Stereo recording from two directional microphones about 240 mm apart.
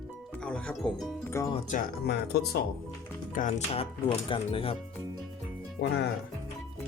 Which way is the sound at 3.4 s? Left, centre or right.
Left.